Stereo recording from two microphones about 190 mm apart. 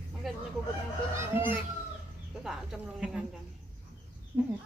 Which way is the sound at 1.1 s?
10° right (ahead or behind).